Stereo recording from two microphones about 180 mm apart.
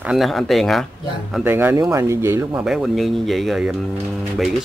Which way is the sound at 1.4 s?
10° right (ahead or behind).